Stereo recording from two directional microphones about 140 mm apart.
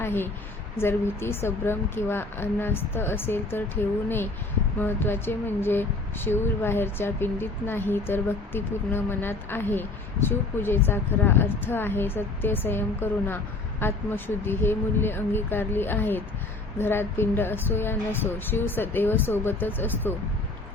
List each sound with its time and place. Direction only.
0.0 s a woman's voice: 15° left (ahead or behind)
4.8 s speech: 15° left (ahead or behind)